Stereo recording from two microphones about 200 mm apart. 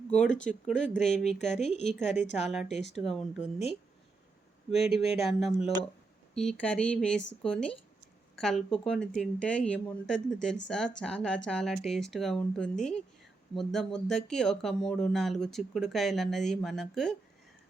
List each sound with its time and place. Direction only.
0.1 s speech: 5° left (ahead or behind)
1.6 s a woman's voice: 35° left (ahead or behind)
2.4 s speech: centre (ahead or behind)
5.0 s speech: 30° left (ahead or behind)
5.3 s speech: centre (ahead or behind)